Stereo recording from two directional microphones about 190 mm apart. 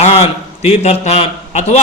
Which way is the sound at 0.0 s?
35° left (ahead or behind).